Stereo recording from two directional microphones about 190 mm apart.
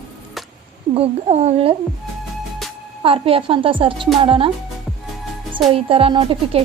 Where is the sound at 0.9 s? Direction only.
35° right (ahead or behind).